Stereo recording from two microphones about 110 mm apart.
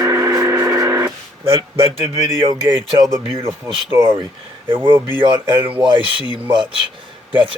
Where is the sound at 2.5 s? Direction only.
45° right (ahead or behind).